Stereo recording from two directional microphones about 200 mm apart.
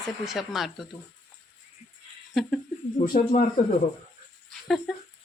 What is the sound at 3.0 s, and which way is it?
Speech, 35° left (ahead or behind).